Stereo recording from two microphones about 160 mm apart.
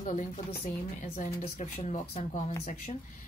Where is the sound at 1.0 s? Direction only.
45° left (ahead or behind).